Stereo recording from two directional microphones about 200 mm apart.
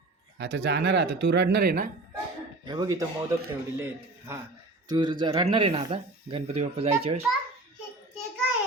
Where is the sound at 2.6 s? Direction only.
20° right (ahead or behind).